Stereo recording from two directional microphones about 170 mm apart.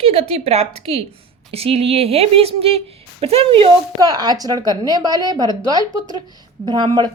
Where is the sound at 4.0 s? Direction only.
20° right (ahead or behind).